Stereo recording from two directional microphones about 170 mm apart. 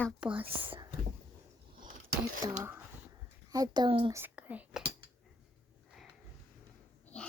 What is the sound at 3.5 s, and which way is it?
Speech, 25° right (ahead or behind).